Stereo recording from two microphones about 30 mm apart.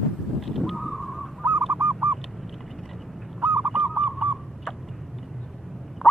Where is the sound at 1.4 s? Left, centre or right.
Right.